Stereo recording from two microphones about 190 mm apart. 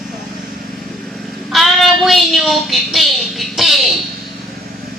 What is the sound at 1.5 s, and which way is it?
Child singing, centre (ahead or behind).